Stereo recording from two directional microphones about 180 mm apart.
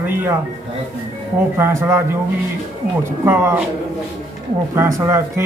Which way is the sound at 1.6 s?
15° right (ahead or behind).